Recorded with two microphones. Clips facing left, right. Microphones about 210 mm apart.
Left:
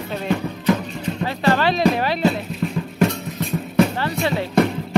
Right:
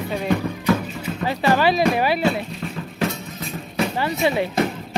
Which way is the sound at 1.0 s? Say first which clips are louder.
Left 3 dB; 15° right (ahead or behind).